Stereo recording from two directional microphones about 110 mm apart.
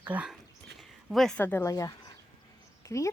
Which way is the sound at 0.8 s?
Centre (ahead or behind).